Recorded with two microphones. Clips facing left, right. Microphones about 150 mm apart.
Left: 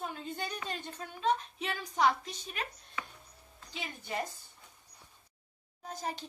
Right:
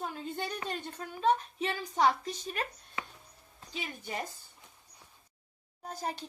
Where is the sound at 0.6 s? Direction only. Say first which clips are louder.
Right 2 dB; 45° right (ahead or behind).